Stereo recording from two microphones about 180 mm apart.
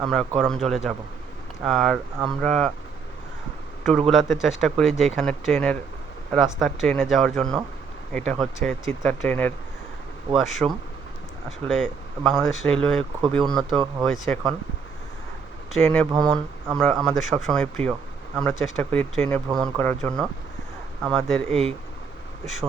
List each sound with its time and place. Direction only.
0.0 s speech: centre (ahead or behind)
3.8 s speech: centre (ahead or behind)
15.7 s speech: 5° left (ahead or behind)
19.5 s speech: 20° right (ahead or behind)
19.8 s speech: 10° left (ahead or behind)
21.5 s speech: 35° right (ahead or behind)